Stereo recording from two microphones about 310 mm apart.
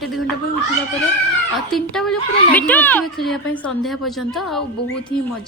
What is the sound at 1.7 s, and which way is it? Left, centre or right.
A woman's voice, centre.